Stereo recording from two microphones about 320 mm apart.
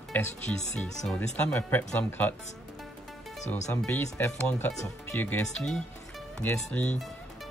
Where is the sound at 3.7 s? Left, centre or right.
Centre.